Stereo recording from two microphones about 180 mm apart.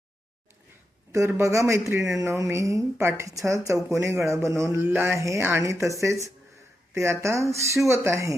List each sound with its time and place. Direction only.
1.1 s speech: 15° right (ahead or behind)